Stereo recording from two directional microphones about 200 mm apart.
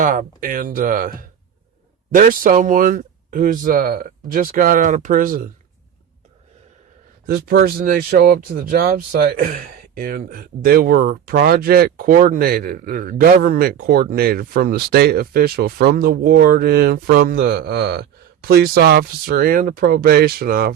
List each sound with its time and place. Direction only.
0.0 s speech: 40° right (ahead or behind)
2.1 s speech: 45° right (ahead or behind)
7.3 s speech: 50° right (ahead or behind)